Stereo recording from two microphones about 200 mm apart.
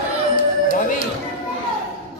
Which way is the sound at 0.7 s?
45° left (ahead or behind).